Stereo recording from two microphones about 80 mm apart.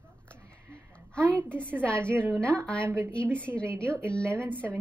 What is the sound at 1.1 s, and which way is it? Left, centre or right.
A woman's voice, centre.